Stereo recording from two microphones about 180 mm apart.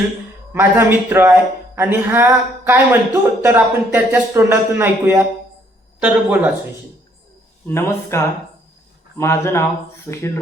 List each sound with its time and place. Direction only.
0.5 s speech: 15° right (ahead or behind)
7.7 s speech: 15° left (ahead or behind)